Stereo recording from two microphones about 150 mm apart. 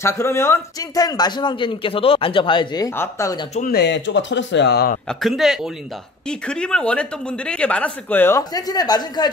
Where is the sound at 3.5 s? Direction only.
80° left.